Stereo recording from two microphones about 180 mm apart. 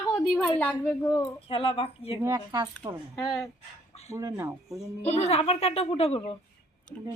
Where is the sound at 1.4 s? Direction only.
30° left (ahead or behind).